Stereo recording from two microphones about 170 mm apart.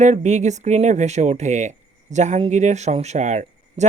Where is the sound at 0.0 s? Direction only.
45° right (ahead or behind).